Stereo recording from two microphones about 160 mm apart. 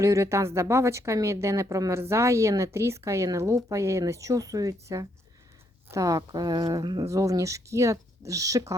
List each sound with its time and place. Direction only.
0.0 s a woman's voice: 20° right (ahead or behind)